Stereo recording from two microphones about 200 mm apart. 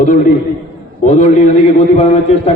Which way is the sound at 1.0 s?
35° left (ahead or behind).